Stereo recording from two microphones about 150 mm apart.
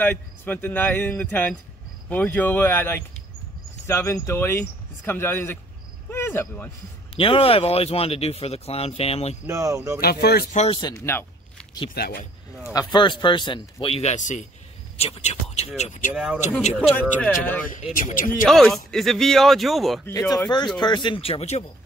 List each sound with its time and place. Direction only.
0.0 s speech: 10° left (ahead or behind)
7.2 s speech: 40° left (ahead or behind)
9.5 s speech: 20° right (ahead or behind)
9.9 s speech: 90° left
10.7 s speech: 25° left (ahead or behind)
11.9 s speech: 90° left
12.7 s speech: 30° left (ahead or behind); by 14.4 s 55° left (ahead or behind)
15.0 s speech: 40° left (ahead or behind)
16.1 s a man's voice: 5° right (ahead or behind)
17.3 s speech: 10° left (ahead or behind)
17.9 s speech: 60° left (ahead or behind)
18.4 s a man's voice: centre (ahead or behind)
20.1 s speech: 20° left (ahead or behind); by 21.6 s 45° left (ahead or behind)